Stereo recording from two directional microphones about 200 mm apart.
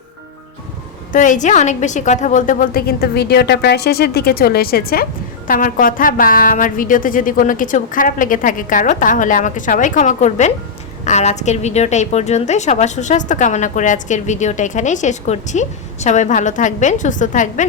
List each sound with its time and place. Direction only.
1.1 s a woman's voice: 40° left (ahead or behind)